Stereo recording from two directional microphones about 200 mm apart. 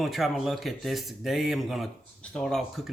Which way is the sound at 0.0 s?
Centre (ahead or behind).